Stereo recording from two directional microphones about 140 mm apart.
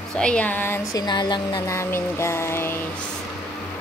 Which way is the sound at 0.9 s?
30° left (ahead or behind).